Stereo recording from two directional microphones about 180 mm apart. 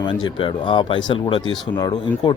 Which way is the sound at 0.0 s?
25° left (ahead or behind).